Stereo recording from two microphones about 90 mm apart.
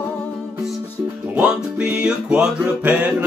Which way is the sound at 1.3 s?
15° right (ahead or behind).